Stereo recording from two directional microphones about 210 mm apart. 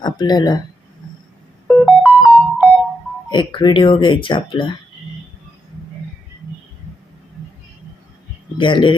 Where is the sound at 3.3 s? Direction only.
20° left (ahead or behind).